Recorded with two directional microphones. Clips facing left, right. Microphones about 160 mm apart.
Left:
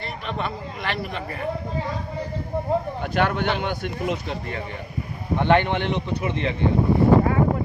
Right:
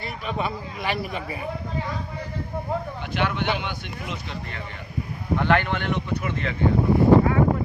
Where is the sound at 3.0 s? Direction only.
45° left (ahead or behind).